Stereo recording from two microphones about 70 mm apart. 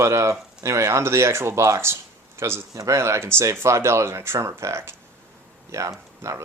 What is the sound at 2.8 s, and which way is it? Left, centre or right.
Speech, right.